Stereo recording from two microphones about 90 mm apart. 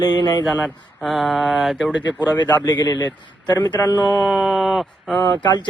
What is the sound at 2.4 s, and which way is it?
Speech, 50° left (ahead or behind).